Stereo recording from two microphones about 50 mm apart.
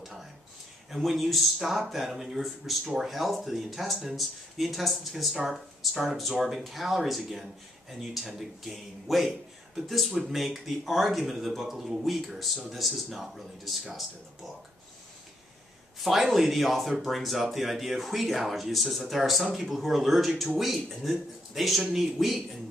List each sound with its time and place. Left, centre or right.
0.8 s speech: centre
16.0 s speech: centre